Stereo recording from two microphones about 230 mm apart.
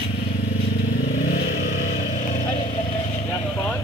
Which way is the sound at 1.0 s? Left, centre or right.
Left.